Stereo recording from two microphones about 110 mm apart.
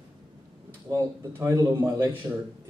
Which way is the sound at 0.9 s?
25° right (ahead or behind).